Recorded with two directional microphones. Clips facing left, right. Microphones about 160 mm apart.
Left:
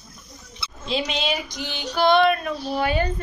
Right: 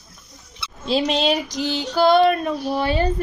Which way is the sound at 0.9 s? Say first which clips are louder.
Right 6 dB; 35° right (ahead or behind).